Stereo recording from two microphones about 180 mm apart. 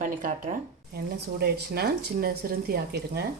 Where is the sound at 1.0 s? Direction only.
60° right (ahead or behind).